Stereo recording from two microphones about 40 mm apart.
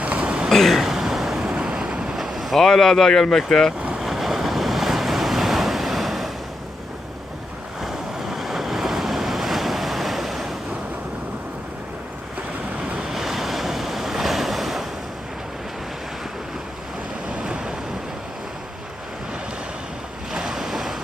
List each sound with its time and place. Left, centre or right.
0.0 s throat clearing: right
0.5 s waves: centre
2.1 s boat: centre
2.6 s speech: centre
4.0 s waves: centre
7.8 s waves: centre
13.1 s waves: centre
17.4 s waves: right
20.3 s waves: centre